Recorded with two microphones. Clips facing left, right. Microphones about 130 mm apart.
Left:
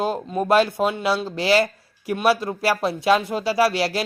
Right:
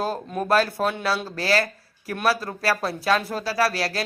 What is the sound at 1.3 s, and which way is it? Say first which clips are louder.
Speech: left 4 dB; 25° left (ahead or behind).